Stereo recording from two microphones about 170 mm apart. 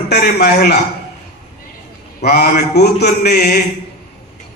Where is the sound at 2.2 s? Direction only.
65° left (ahead or behind).